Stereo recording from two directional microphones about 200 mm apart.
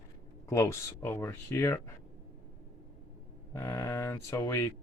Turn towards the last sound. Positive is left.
turn(degrees=15)  # may be behind; listen again after turning